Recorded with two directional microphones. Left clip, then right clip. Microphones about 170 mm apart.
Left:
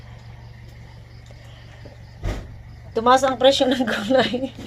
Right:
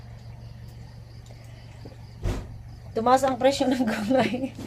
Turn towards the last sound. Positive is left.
turn(degrees=20)  # may be behind; listen again after turning